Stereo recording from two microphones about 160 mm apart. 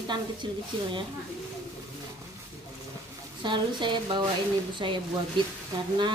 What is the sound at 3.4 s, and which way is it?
A woman's voice, 30° right (ahead or behind).